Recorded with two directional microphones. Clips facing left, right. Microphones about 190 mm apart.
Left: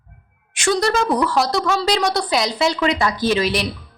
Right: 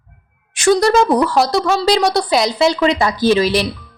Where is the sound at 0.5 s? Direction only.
35° right (ahead or behind).